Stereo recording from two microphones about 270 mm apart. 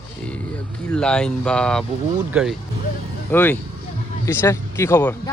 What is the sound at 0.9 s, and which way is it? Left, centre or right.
Speech, centre.